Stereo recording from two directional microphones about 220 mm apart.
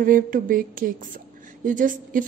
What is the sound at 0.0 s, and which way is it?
Speech, 40° right (ahead or behind).